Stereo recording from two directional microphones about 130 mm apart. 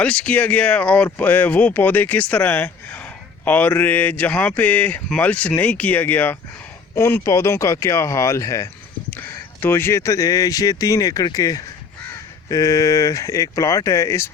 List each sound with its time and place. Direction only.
0.0 s speech: 10° left (ahead or behind)